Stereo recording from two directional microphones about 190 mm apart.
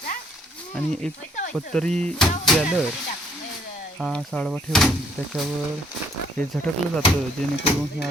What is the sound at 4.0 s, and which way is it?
Speech, centre (ahead or behind).